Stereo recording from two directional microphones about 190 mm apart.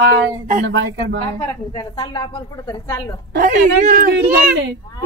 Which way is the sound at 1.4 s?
20° left (ahead or behind).